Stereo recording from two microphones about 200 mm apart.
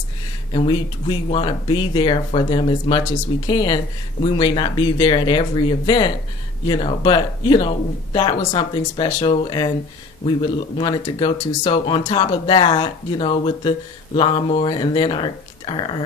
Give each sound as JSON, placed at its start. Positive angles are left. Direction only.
{"t": 0.5, "sound": "speech", "side_deg": 25}